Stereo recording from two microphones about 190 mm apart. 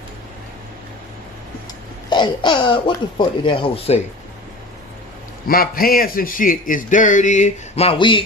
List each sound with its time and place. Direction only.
2.0 s speech: 25° left (ahead or behind)
5.5 s speech: 50° left (ahead or behind); by 8.2 s 25° left (ahead or behind)